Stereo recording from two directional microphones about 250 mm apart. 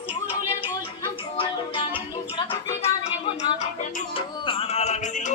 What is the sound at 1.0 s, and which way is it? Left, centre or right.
Music, left.